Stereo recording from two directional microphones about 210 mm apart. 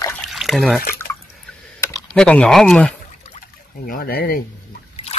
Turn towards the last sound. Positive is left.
turn(degrees=45)  # may be behind; listen again after turning